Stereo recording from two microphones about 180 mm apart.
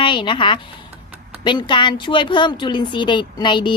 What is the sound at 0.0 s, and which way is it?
Speech, 25° left (ahead or behind).